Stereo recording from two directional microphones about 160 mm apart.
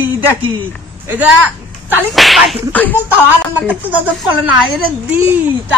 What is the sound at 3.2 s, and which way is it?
A woman's voice, 10° right (ahead or behind).